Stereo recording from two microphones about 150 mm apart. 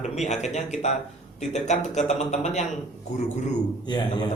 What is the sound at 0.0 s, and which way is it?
Speech, 50° left (ahead or behind).